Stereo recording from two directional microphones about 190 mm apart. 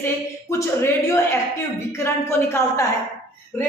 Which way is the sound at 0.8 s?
15° left (ahead or behind).